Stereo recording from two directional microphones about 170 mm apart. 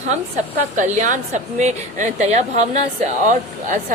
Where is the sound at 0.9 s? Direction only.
45° right (ahead or behind).